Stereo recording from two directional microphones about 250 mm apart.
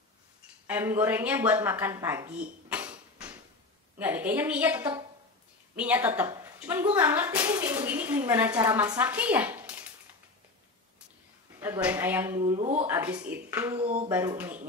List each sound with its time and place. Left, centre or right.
0.7 s a woman's voice: centre
2.7 s a sound: centre
4.0 s a woman's voice: centre
11.6 s a woman's voice: centre
12.5 s speech: right
12.8 s a woman's voice: centre